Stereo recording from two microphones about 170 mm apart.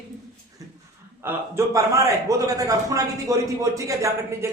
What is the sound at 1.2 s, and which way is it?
A man's voice, 15° right (ahead or behind).